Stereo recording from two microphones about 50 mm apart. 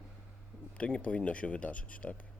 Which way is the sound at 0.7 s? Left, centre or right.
Left.